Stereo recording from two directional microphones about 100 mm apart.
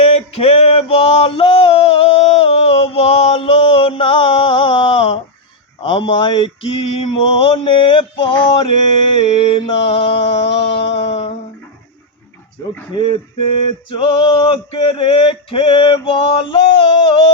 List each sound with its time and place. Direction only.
0.0 s male singing: 90° left; by 8.7 s 60° left (ahead or behind)
9.2 s mantra: 85° left
13.9 s male singing: 55° left (ahead or behind)